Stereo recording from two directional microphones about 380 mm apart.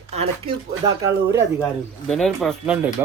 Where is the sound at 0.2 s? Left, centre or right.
Centre.